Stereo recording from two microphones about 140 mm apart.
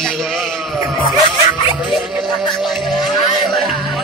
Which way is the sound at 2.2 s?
30° left (ahead or behind).